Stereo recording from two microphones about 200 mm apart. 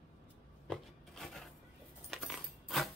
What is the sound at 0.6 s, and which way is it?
Rub, centre (ahead or behind).